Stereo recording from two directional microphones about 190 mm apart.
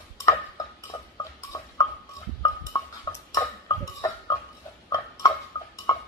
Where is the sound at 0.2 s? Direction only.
15° left (ahead or behind).